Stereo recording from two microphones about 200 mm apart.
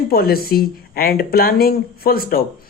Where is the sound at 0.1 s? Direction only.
50° left (ahead or behind).